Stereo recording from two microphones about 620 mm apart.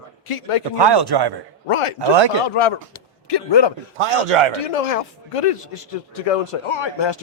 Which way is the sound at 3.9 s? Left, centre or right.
Right.